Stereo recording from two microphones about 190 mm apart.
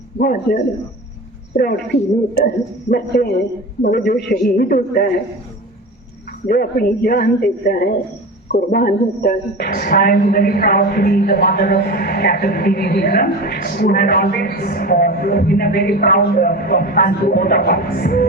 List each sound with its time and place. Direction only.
0.2 s a woman's voice: 55° left (ahead or behind)
6.5 s a woman's voice: 50° left (ahead or behind)